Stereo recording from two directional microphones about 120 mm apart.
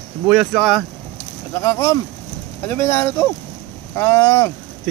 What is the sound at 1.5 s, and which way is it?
Speech, 25° left (ahead or behind).